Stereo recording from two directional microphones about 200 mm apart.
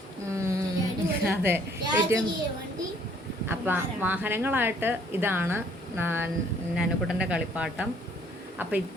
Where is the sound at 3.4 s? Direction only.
10° right (ahead or behind).